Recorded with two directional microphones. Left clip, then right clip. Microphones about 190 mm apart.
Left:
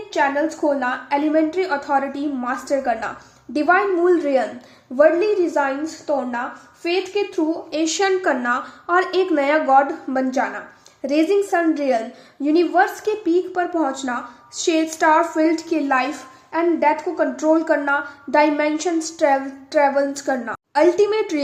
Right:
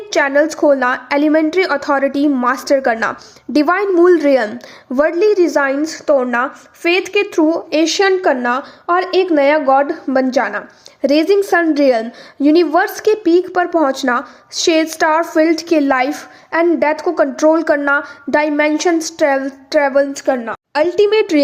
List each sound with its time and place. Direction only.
0.1 s a woman's voice: 55° right (ahead or behind)
7.7 s a woman's voice: 40° right (ahead or behind)
20.1 s a woman's voice: 30° right (ahead or behind)
20.7 s a woman's voice: 45° right (ahead or behind)